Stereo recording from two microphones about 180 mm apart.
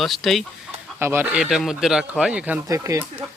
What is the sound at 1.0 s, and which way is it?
Speech, 10° right (ahead or behind).